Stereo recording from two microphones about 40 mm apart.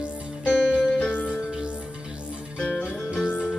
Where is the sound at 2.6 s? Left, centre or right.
Left.